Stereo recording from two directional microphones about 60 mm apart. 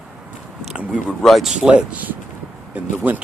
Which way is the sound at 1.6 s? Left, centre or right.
Centre.